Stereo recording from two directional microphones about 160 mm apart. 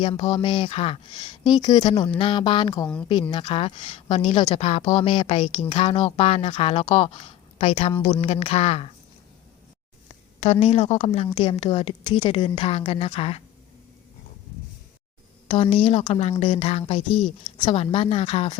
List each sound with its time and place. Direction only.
0.0 s speech: 30° left (ahead or behind)
2.8 s a woman's voice: 5° left (ahead or behind)
3.1 s speech: 30° left (ahead or behind)
10.4 s a woman's voice: 45° left (ahead or behind)
15.4 s a woman's voice: 45° left (ahead or behind)
17.1 s a woman's voice: 5° left (ahead or behind)
17.7 s speech: 35° left (ahead or behind)